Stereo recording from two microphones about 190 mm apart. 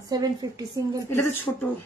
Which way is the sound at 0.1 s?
20° right (ahead or behind).